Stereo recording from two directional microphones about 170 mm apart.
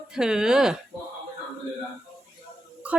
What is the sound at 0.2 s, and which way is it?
Speech, 5° right (ahead or behind).